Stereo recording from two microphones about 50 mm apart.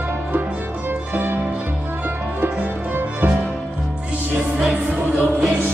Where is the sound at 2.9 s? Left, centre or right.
Right.